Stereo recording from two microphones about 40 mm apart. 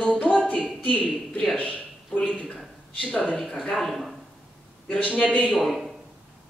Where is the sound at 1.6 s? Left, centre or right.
Left.